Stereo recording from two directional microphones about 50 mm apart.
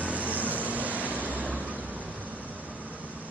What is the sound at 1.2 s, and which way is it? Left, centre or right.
Waves, right.